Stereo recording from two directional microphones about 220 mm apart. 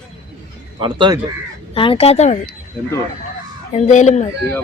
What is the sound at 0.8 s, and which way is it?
Speech, 20° right (ahead or behind).